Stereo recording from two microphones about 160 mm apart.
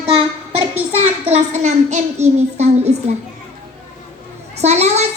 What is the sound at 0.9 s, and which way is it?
A child's voice, 40° right (ahead or behind).